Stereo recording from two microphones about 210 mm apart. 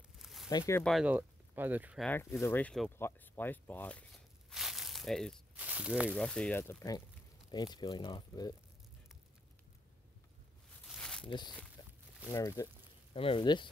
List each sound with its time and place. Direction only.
0.2 s a sound: centre (ahead or behind)
0.5 s speech: 15° left (ahead or behind)
0.8 s speech: 5° right (ahead or behind)
2.0 s speech: 10° left (ahead or behind)
10.9 s a sound: 5° left (ahead or behind)
11.2 s speech: 20° left (ahead or behind)
11.8 s a sound: 20° left (ahead or behind)
12.3 s speech: 15° left (ahead or behind)
13.1 s speech: 25° left (ahead or behind)